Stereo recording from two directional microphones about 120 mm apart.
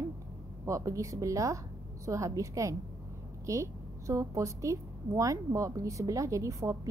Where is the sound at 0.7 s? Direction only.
25° right (ahead or behind).